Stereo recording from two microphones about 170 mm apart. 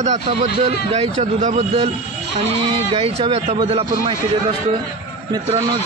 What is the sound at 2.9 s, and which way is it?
Speech, 35° right (ahead or behind).